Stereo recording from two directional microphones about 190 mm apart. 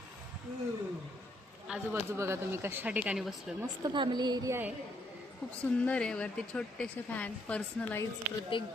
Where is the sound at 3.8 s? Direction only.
25° right (ahead or behind).